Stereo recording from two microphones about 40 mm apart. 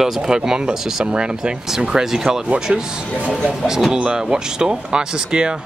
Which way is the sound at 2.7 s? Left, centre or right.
Right.